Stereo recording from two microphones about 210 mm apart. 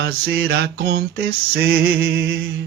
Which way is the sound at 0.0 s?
50° right (ahead or behind).